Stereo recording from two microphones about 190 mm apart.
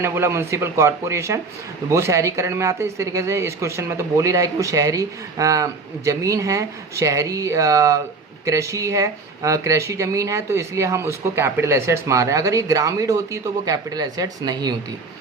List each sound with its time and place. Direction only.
0.0 s speech: 15° right (ahead or behind)